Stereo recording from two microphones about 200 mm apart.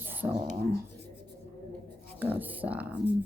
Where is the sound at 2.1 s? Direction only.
10° right (ahead or behind).